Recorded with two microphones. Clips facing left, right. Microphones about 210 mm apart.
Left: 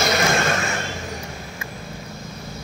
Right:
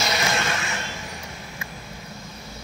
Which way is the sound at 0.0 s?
50° left (ahead or behind).